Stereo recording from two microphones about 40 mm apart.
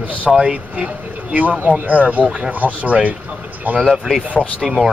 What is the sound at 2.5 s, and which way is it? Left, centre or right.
Speech, right.